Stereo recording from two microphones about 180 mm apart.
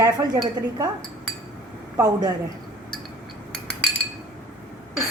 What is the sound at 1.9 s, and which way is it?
Speech, 20° right (ahead or behind).